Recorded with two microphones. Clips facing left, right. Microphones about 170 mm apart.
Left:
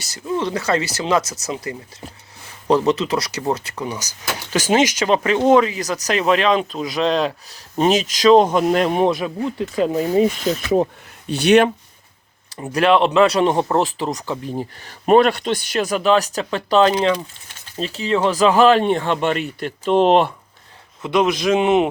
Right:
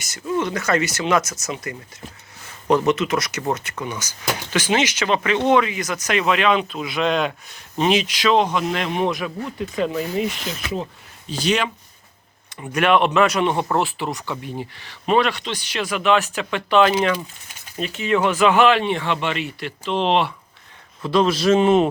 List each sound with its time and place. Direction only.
0.0 s speech: 30° left (ahead or behind)
2.8 s speech: 35° left (ahead or behind)
11.3 s speech: 65° left (ahead or behind)
12.5 s speech: 30° left (ahead or behind)
21.0 s speech: 20° left (ahead or behind)